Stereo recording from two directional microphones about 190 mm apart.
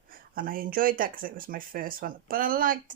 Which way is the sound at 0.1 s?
45° right (ahead or behind).